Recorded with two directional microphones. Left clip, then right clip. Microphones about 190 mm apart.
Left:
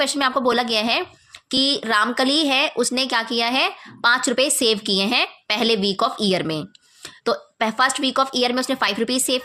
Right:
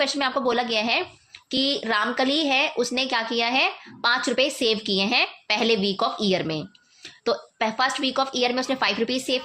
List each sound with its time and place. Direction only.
0.0 s a woman's voice: 30° left (ahead or behind)